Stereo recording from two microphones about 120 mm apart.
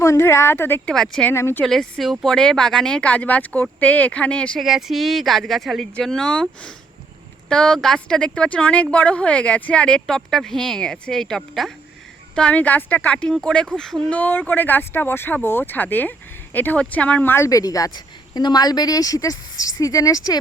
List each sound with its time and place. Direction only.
0.0 s speech: 25° left (ahead or behind)
0.9 s speech: 5° left (ahead or behind)
1.3 s speech: 20° left (ahead or behind)
1.6 s speech: 5° left (ahead or behind)
4.6 s speech: centre (ahead or behind); by 20.4 s 30° left (ahead or behind)